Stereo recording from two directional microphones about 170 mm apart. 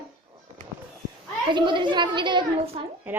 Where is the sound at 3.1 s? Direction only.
10° right (ahead or behind).